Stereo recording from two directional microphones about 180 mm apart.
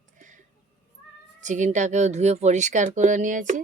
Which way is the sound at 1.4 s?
40° right (ahead or behind).